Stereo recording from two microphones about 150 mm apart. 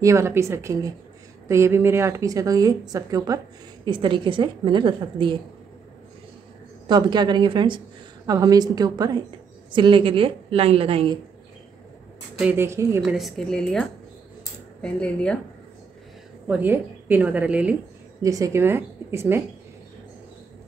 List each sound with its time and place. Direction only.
0.0 s a woman's voice: 20° right (ahead or behind)
6.9 s a woman's voice: 30° right (ahead or behind)
12.4 s a woman's voice: 15° right (ahead or behind)
13.0 s a woman's voice: centre (ahead or behind)
16.4 s a woman's voice: 10° right (ahead or behind)
18.2 s a woman's voice: 20° right (ahead or behind)